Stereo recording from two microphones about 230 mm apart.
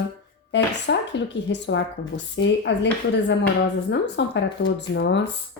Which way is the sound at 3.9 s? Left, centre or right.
Left.